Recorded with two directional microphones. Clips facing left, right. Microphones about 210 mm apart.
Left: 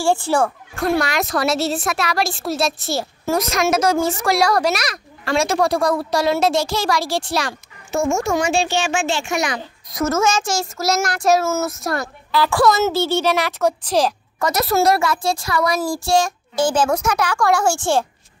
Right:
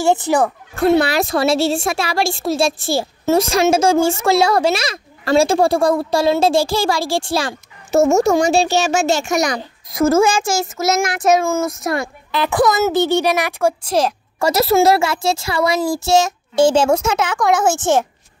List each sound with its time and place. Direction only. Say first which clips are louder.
0.0 s a woman's voice: right 2 dB; 20° right (ahead or behind)
0.7 s a woman's voice: right 5 dB; 30° right (ahead or behind)
9.8 s a woman's voice: right 5 dB; 30° right (ahead or behind)
10.6 s speech: right 3 dB; centre (ahead or behind)
12.3 s speech: even; 20° right (ahead or behind)
14.4 s a woman's voice: right 4 dB; 25° right (ahead or behind)